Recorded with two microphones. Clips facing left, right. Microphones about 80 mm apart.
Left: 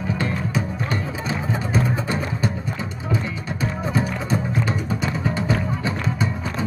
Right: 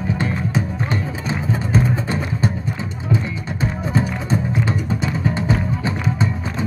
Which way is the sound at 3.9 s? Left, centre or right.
Right.